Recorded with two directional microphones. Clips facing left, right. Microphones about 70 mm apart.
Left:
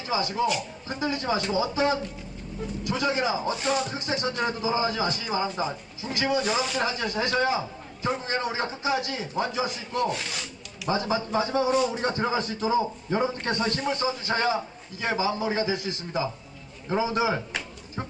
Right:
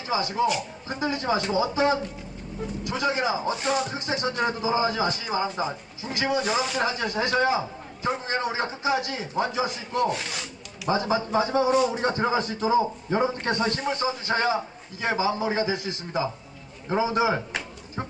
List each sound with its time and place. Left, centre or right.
0.0 s a man's voice: centre